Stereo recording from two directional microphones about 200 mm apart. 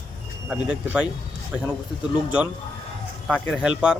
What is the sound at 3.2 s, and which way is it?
Speech, 5° right (ahead or behind).